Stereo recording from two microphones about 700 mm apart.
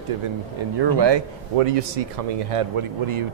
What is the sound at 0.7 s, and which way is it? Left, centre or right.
Speech, right.